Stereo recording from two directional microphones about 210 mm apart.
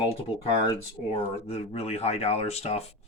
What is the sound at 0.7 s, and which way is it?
Speech, 30° left (ahead or behind).